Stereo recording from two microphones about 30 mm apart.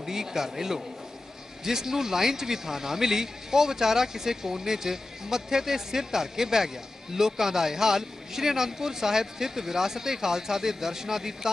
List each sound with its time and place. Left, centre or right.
0.0 s a man's voice: centre